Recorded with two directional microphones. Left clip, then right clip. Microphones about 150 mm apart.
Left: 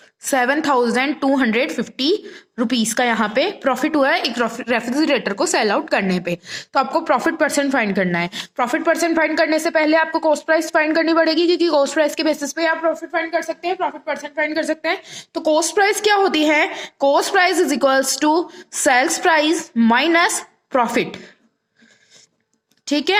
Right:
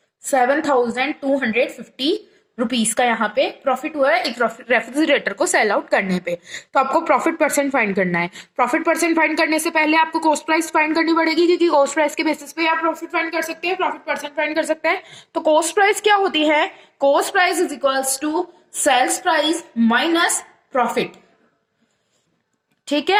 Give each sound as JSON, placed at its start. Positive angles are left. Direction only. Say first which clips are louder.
{"t": 0.5, "sound": "a woman's voice", "louder": "left 1 dB", "side_deg": 45}
{"t": 11.4, "sound": "a woman's voice", "louder": "right 1 dB", "side_deg": 40}
{"t": 12.5, "sound": "a woman's voice", "louder": "even", "side_deg": 20}
{"t": 14.7, "sound": "a woman's voice", "louder": "right 2 dB", "side_deg": 30}
{"t": 15.4, "sound": "a woman's voice", "louder": "right 1 dB", "side_deg": 45}
{"t": 22.9, "sound": "a woman's voice", "louder": "even", "side_deg": 45}